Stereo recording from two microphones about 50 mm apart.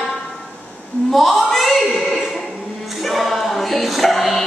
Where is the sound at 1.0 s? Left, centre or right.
Centre.